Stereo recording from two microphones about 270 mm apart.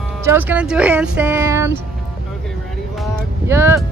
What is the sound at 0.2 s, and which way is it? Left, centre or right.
Speech, centre.